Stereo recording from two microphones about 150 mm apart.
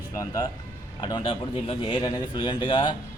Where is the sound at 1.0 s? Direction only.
30° left (ahead or behind).